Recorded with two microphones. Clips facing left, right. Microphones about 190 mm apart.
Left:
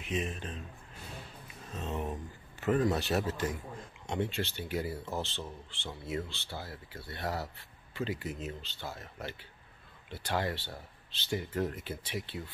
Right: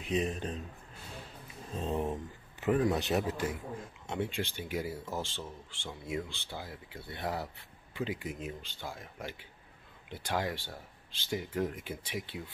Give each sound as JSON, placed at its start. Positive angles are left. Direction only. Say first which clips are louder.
{"t": 0.0, "sound": "a man's voice", "louder": "right 3 dB", "side_deg": -35}
{"t": 1.7, "sound": "speech", "louder": "right 3 dB", "side_deg": -30}
{"t": 2.6, "sound": "speech", "louder": "even", "side_deg": -15}